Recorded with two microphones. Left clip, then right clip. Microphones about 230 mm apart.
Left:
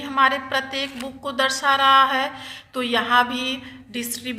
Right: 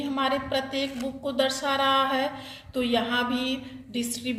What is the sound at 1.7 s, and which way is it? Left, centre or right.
A woman's voice, centre.